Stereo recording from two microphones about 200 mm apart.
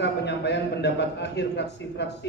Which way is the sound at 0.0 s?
60° left (ahead or behind).